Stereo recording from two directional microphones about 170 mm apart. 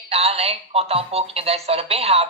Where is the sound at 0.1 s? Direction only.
35° right (ahead or behind).